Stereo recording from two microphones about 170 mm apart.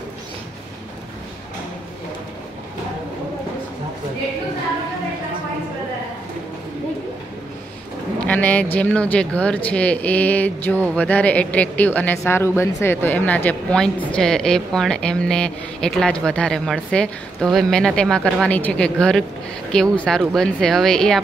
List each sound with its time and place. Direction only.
8.3 s speech: 10° left (ahead or behind)